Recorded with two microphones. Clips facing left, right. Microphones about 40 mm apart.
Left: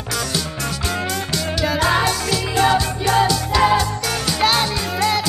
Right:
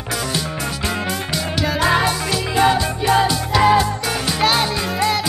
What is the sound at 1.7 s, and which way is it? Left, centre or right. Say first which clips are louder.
Music: right 1 dB; centre.